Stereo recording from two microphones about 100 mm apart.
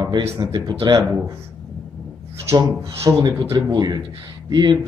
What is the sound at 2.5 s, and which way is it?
Speech, 30° right (ahead or behind).